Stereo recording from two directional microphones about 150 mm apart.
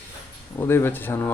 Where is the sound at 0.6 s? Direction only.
15° left (ahead or behind).